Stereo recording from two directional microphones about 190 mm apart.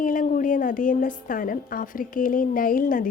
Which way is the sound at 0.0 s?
45° left (ahead or behind).